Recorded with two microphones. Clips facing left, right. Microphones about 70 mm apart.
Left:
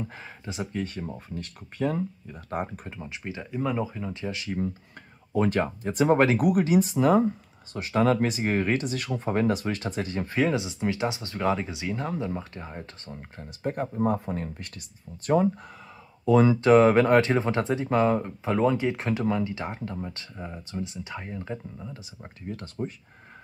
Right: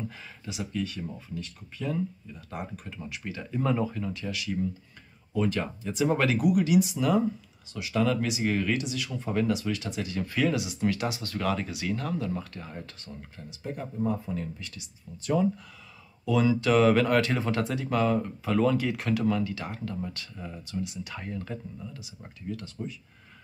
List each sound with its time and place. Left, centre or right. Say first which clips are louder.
0.0 s speech: left 2 dB; left
2.9 s speech: left 1 dB; left
4.1 s speech: left 1 dB; left
5.3 s speech: left 4 dB; left